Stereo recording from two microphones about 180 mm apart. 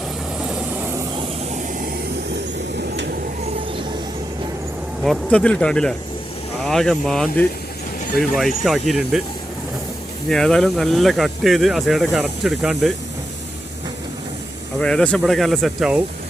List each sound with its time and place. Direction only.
2.9 s a sound: 75° right (ahead or behind)
5.0 s speech: 5° left (ahead or behind)
14.8 s speech: 5° left (ahead or behind)